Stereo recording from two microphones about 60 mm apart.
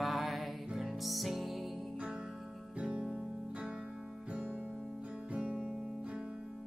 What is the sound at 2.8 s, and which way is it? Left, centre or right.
Music, centre.